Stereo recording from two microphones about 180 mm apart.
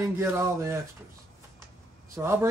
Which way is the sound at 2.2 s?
20° right (ahead or behind).